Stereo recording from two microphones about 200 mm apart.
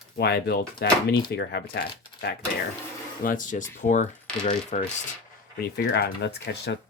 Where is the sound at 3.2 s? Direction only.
40° left (ahead or behind).